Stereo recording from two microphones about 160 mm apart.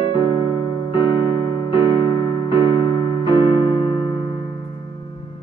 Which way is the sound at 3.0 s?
25° left (ahead or behind).